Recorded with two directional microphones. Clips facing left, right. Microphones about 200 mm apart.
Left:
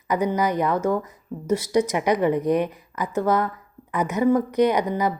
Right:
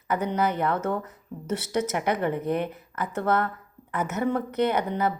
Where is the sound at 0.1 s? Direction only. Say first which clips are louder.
Left 3 dB; 10° left (ahead or behind).